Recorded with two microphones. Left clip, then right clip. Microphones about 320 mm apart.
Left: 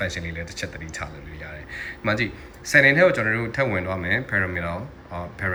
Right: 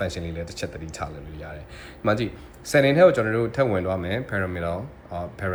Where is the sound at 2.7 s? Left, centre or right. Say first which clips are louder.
Left 1 dB; centre.